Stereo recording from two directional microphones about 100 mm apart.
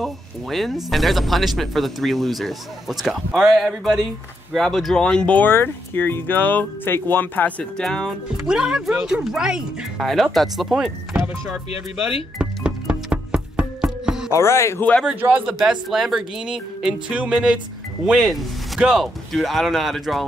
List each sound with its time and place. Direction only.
0.0 s speech: centre (ahead or behind)
8.5 s speech: 5° right (ahead or behind)
12.4 s music: 10° right (ahead or behind)
14.3 s speech: 25° left (ahead or behind)
15.0 s speech: 15° right (ahead or behind)
15.6 s speech: 5° right (ahead or behind)